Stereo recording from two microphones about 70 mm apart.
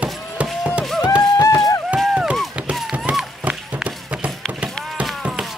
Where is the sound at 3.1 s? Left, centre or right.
Centre.